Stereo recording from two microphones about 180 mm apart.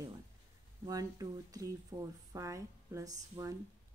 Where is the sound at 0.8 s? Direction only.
20° right (ahead or behind).